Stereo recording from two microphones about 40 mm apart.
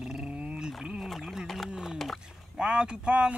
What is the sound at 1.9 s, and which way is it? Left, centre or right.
Speech, centre.